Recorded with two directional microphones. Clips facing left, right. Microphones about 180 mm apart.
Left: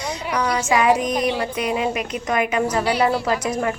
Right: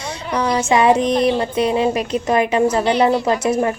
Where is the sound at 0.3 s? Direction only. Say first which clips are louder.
Right 4 dB; 30° right (ahead or behind).